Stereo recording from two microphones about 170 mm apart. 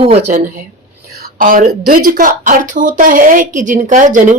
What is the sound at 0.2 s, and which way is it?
A woman's voice, 55° right (ahead or behind).